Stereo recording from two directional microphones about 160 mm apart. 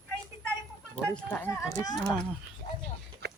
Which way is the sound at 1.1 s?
10° left (ahead or behind).